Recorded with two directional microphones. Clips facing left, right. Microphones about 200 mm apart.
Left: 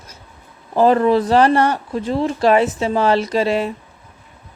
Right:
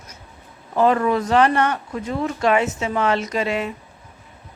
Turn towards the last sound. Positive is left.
turn(degrees=35)  # may be behind; listen again after turning